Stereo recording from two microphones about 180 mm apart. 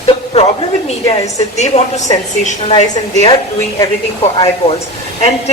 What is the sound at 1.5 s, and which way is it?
A woman's voice, 40° left (ahead or behind).